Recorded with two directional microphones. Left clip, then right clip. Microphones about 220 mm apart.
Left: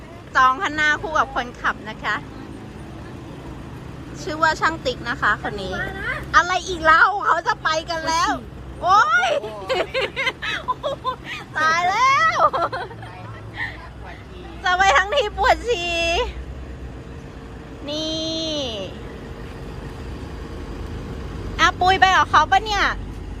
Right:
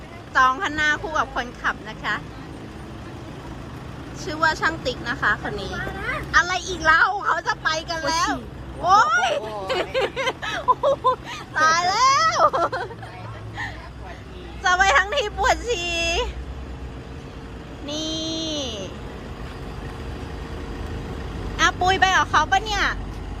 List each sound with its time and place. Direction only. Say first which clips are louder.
0.3 s a woman's voice: left 2 dB; 10° right (ahead or behind)
4.3 s a woman's voice: left 2 dB; 5° right (ahead or behind)
10.8 s a sound: right 6 dB; 25° right (ahead or behind)
11.5 s a woman's voice: even; 10° right (ahead or behind)
14.6 s a woman's voice: left 1 dB; 10° right (ahead or behind)
17.8 s child singing: left 2 dB; 5° right (ahead or behind)
21.1 s speech: right 1 dB; 5° right (ahead or behind)